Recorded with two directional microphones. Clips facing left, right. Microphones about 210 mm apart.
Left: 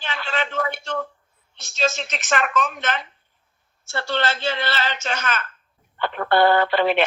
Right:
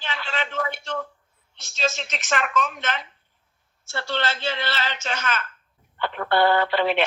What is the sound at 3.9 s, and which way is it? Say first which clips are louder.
Speech: left 3 dB; 45° left (ahead or behind).